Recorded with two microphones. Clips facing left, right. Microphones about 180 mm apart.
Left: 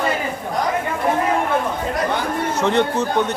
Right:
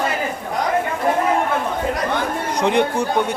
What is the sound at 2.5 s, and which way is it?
Speech, 15° right (ahead or behind).